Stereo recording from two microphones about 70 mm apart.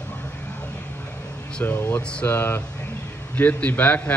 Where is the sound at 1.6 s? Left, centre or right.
Left.